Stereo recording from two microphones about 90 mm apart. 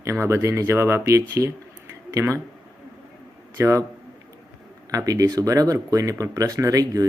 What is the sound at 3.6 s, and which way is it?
Speech, 35° right (ahead or behind).